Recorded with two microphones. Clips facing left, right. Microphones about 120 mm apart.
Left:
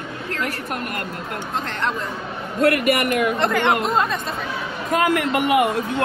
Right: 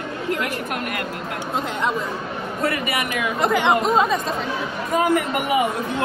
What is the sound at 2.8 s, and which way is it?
Speech, 55° left (ahead or behind).